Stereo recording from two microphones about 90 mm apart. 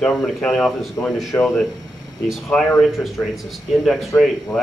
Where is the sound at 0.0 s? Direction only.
10° left (ahead or behind).